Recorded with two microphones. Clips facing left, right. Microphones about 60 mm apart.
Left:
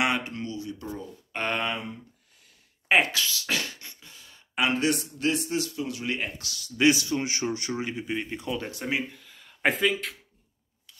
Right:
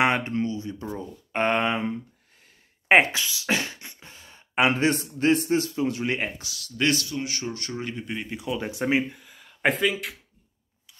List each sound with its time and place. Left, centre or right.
0.0 s speech: right
6.5 s speech: centre
7.1 s speech: left; by 8.5 s centre
8.5 s speech: centre
9.5 s speech: centre